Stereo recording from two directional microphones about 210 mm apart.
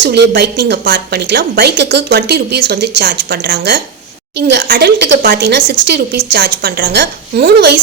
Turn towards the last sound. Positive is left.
turn(degrees=-50)  # may be behind; listen again after turning